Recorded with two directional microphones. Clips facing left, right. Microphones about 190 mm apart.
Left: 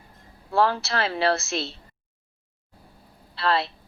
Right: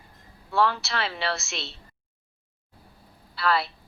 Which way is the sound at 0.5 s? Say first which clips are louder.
Left 2 dB; 35° left (ahead or behind).